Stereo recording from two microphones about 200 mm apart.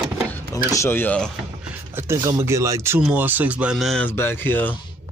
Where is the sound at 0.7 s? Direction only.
15° left (ahead or behind).